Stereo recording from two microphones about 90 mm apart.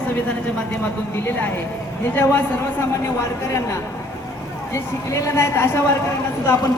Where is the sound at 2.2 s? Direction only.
25° left (ahead or behind).